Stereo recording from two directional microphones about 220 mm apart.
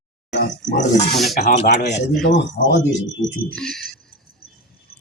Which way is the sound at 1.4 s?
35° left (ahead or behind).